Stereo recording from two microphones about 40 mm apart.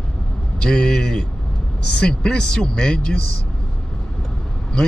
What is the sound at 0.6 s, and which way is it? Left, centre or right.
Speech, left.